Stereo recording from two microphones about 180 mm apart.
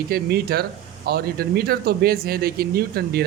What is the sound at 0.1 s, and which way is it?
Speech, 60° right (ahead or behind).